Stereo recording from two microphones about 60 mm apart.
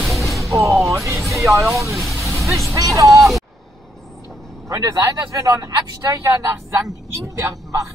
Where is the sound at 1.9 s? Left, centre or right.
Centre.